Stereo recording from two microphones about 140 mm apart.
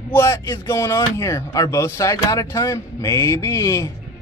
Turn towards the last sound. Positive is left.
turn(degrees=25)  # may be behind; listen again after turning